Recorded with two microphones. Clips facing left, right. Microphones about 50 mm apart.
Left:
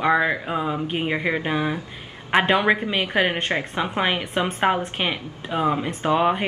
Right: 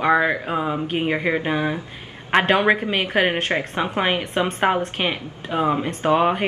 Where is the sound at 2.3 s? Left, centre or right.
Centre.